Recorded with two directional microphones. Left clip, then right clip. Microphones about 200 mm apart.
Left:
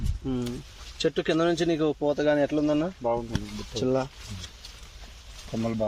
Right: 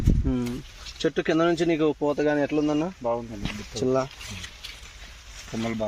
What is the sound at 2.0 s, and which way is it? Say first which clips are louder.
Speech: even; 25° right (ahead or behind).